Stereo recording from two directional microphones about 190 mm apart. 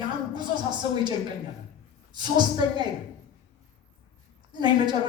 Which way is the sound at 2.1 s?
25° right (ahead or behind).